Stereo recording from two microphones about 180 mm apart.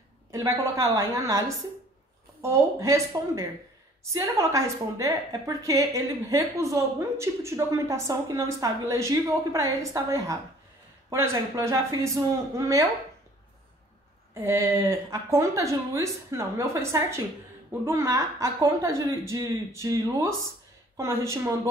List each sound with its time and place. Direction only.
0.3 s a woman's voice: 20° right (ahead or behind)
2.4 s a woman's voice: 15° right (ahead or behind)
14.3 s a woman's voice: 15° right (ahead or behind)